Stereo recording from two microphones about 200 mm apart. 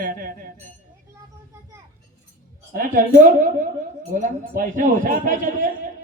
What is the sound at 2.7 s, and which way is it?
A woman's voice, 45° right (ahead or behind).